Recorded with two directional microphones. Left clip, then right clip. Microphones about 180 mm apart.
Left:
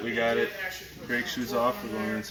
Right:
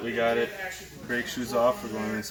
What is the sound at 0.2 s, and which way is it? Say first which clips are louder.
Speech: right 1 dB; centre (ahead or behind).